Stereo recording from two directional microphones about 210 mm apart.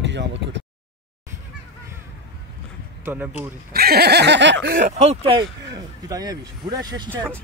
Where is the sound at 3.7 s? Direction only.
45° right (ahead or behind).